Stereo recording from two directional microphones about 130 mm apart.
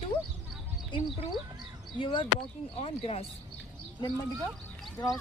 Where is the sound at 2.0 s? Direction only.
40° left (ahead or behind).